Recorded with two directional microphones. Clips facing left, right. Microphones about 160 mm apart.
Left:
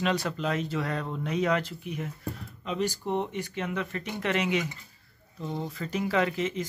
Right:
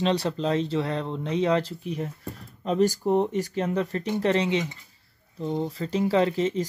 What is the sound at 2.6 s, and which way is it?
Speech, 45° right (ahead or behind).